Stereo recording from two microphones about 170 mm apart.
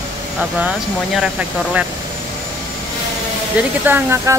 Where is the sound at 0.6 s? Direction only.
5° right (ahead or behind).